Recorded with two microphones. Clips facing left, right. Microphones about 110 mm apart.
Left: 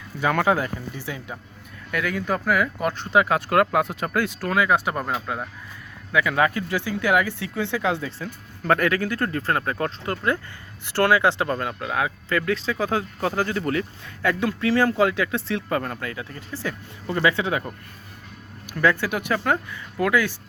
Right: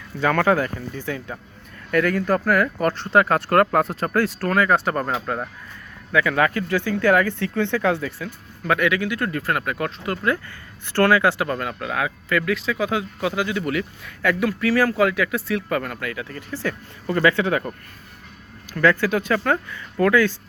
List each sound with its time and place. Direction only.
0.2 s speech: 15° left (ahead or behind)
1.9 s speech: 5° left (ahead or behind)
6.1 s speech: 20° left (ahead or behind)
8.2 s speech: 40° left (ahead or behind)
10.8 s speech: 15° left (ahead or behind)
18.7 s speech: 15° left (ahead or behind)